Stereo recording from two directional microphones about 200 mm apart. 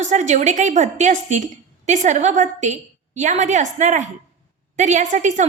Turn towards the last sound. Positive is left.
turn(degrees=-35)  # may be behind; listen again after turning